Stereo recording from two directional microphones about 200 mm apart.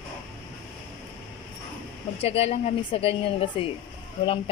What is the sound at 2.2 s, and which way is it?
A woman's voice, 30° left (ahead or behind).